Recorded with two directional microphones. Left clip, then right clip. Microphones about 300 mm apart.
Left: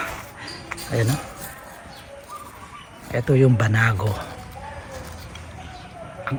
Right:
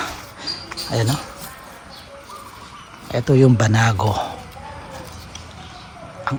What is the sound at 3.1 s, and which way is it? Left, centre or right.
Speech, centre.